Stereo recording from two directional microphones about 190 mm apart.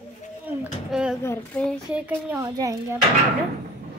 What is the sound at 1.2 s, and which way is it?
Speech, 10° left (ahead or behind).